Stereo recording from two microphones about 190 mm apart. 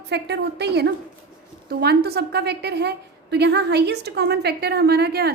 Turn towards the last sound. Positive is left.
turn(degrees=-55)  # may be behind; listen again after turning